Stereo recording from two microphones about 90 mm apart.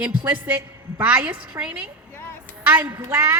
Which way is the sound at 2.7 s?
20° right (ahead or behind).